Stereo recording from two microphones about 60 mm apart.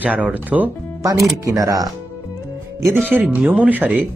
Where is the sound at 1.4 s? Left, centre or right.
Right.